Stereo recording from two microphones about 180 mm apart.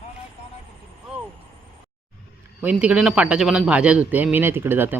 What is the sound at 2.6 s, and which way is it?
Speech, 5° right (ahead or behind).